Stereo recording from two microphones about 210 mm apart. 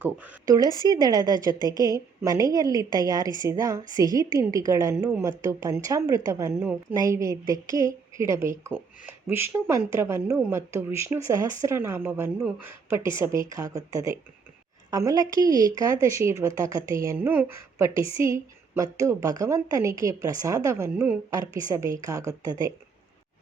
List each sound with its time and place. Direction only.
0.0 s a woman's voice: 10° right (ahead or behind)